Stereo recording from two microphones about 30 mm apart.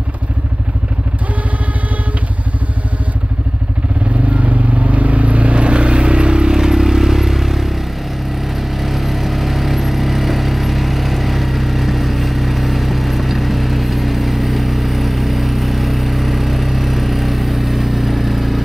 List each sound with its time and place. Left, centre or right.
4.3 s vehicle: right
6.5 s vehicle: centre
8.7 s vehicle: centre